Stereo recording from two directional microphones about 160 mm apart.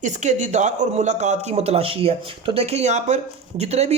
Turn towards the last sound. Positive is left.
turn(degrees=-40)  # may be behind; listen again after turning